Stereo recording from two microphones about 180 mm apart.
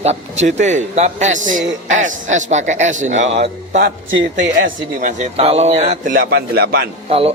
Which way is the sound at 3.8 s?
80° right.